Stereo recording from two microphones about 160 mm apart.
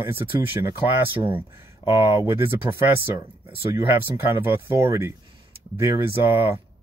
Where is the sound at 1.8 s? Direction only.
35° left (ahead or behind).